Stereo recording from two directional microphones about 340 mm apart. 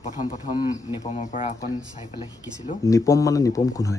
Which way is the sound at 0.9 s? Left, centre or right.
Left.